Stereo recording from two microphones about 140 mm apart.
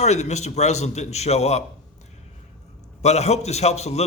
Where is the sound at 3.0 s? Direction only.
50° left (ahead or behind).